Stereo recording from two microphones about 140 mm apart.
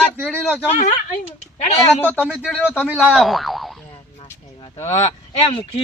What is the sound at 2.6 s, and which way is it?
Speech, 10° right (ahead or behind).